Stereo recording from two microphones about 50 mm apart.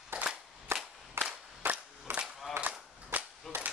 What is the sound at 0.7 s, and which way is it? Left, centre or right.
Cap gun, right.